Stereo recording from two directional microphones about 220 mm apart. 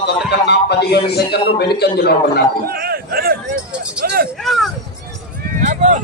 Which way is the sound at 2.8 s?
45° right (ahead or behind).